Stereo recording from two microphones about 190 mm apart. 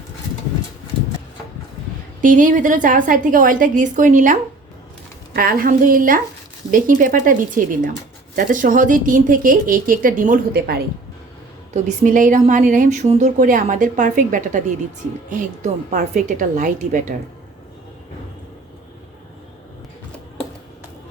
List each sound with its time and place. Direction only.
2.2 s a woman's voice: 45° right (ahead or behind)